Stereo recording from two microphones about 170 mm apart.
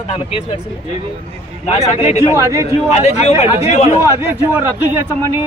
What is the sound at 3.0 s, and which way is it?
Speech, 40° left (ahead or behind).